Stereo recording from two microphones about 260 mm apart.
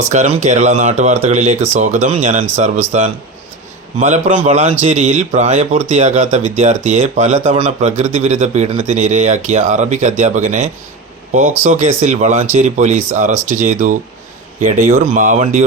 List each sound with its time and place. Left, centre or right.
0.0 s speech: right
4.0 s speech: right